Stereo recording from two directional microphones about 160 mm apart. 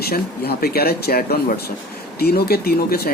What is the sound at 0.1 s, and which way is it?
Speech, 70° left (ahead or behind).